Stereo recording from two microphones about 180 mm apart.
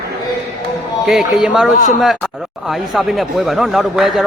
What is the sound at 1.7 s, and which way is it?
Speech, 45° left (ahead or behind).